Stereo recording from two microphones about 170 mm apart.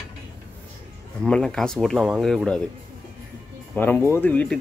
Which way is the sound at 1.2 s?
5° left (ahead or behind).